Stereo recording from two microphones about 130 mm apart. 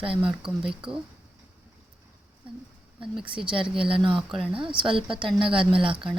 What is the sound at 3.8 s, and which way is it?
Speech, 40° right (ahead or behind).